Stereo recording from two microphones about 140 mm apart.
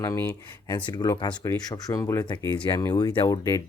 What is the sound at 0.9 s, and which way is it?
Speech, 30° left (ahead or behind).